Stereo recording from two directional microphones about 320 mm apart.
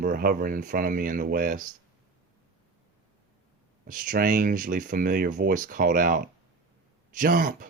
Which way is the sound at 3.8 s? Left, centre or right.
Right.